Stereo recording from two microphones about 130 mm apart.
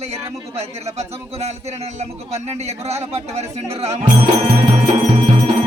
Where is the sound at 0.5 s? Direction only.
55° right (ahead or behind).